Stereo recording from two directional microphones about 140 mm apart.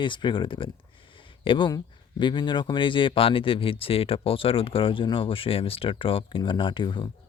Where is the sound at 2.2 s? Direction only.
35° left (ahead or behind).